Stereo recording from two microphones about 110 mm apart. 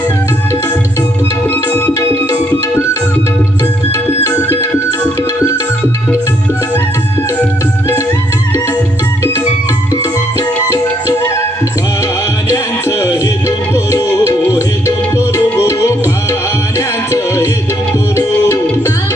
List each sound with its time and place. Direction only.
1.5 s tabla: 20° left (ahead or behind)
2.5 s music: 25° left (ahead or behind)
9.9 s music: 30° left (ahead or behind)
12.5 s music: 25° left (ahead or behind)
15.7 s music: 30° left (ahead or behind)
18.4 s music: 25° left (ahead or behind)